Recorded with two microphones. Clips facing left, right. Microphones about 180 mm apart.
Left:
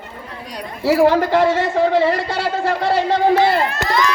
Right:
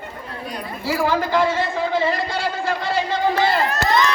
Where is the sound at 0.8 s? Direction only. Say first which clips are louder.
Left 7 dB; 65° left (ahead or behind).